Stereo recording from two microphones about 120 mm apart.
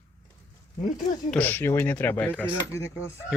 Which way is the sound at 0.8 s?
90° left.